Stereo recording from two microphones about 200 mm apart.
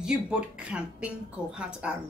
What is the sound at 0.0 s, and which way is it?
A woman's voice, 5° right (ahead or behind).